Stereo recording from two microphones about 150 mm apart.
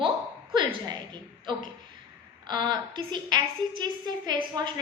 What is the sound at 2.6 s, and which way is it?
A woman's voice, 30° right (ahead or behind).